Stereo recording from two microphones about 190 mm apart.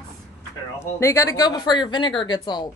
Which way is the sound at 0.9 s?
15° left (ahead or behind).